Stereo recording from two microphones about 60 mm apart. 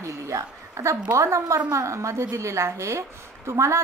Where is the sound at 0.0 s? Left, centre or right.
Right.